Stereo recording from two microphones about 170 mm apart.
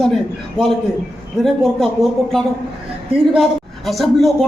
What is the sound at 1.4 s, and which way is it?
A man's voice, centre (ahead or behind).